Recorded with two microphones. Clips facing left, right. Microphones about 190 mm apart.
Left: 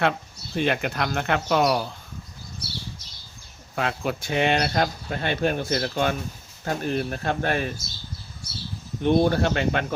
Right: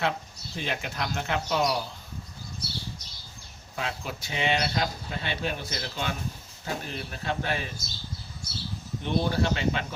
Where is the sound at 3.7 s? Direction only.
60° left (ahead or behind).